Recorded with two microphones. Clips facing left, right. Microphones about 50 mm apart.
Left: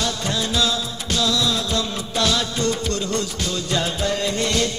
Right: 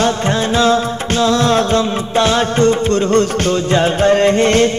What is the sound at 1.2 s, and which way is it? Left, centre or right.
Music, right.